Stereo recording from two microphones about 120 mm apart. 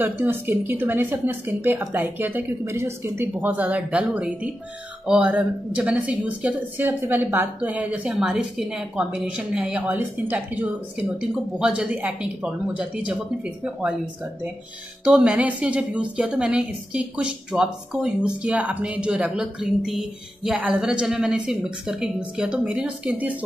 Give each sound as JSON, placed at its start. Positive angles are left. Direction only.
{"t": 0.0, "sound": "a woman's voice", "side_deg": -15}
{"t": 15.0, "sound": "a woman's voice", "side_deg": -10}